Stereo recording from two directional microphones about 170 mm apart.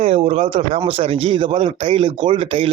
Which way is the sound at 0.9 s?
35° right (ahead or behind).